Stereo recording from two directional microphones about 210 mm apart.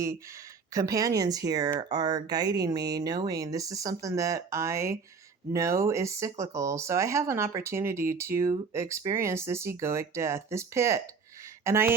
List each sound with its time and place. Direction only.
0.7 s speech: 15° right (ahead or behind)